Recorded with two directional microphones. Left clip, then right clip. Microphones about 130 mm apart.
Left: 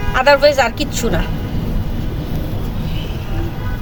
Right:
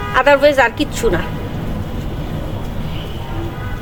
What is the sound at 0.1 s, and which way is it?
Speech, 40° right (ahead or behind).